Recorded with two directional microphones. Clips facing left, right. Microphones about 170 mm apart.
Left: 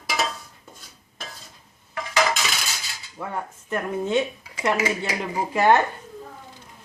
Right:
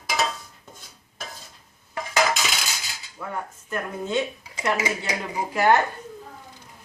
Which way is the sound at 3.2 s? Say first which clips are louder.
Left 2 dB; 25° left (ahead or behind).